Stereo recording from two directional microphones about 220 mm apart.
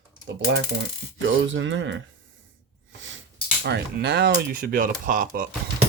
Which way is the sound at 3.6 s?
50° right (ahead or behind).